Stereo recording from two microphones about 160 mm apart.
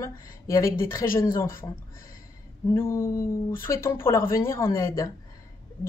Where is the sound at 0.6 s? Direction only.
65° left (ahead or behind).